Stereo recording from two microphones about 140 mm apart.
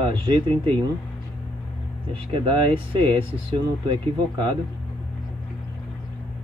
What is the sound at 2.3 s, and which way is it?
Speech, 35° right (ahead or behind).